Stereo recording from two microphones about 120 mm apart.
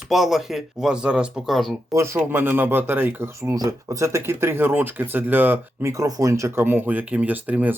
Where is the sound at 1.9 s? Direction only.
25° right (ahead or behind).